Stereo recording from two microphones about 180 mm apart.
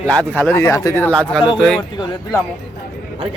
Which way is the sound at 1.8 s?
25° left (ahead or behind).